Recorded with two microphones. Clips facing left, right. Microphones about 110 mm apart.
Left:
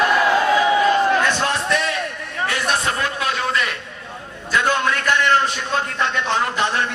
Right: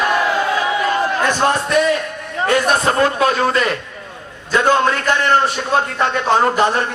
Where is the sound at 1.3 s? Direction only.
40° right (ahead or behind).